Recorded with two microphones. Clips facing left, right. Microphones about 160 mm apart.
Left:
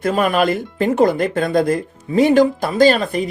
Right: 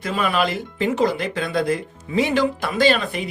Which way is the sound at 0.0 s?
45° left (ahead or behind).